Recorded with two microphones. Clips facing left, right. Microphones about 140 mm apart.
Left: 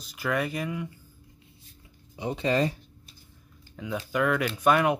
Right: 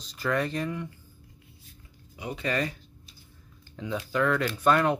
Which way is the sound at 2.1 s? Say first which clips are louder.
Left 4 dB; 25° left (ahead or behind).